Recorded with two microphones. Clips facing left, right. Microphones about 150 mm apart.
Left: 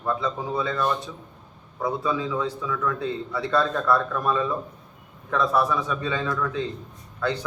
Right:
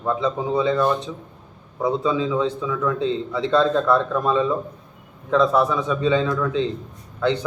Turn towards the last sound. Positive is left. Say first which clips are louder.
# right 6 dB
turn(degrees=-20)  # may be behind; listen again after turning